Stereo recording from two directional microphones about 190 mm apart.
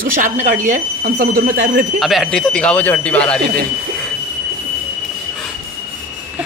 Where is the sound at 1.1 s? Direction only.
55° right (ahead or behind).